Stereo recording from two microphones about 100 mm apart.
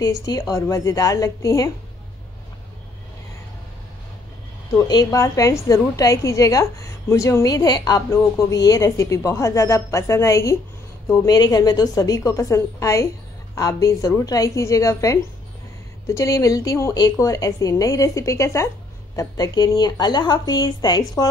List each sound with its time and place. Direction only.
0.0 s a woman's voice: 35° left (ahead or behind)
4.7 s a woman's voice: 40° left (ahead or behind)
11.2 s a woman's voice: 40° left (ahead or behind)